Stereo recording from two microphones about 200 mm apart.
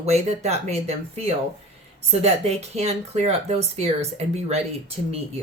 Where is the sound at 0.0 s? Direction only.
35° right (ahead or behind).